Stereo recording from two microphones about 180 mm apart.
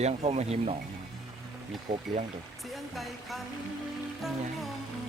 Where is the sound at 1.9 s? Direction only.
45° right (ahead or behind).